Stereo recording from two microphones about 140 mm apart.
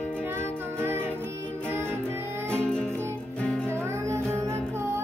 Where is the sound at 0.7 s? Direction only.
15° right (ahead or behind).